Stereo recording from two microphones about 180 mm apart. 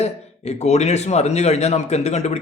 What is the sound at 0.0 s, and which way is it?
Speech, 35° left (ahead or behind).